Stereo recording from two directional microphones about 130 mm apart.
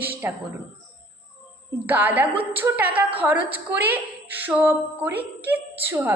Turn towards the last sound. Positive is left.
turn(degrees=-15)  # may be behind; listen again after turning